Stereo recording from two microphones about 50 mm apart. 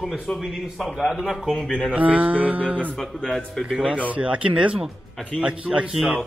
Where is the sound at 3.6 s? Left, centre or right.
Centre.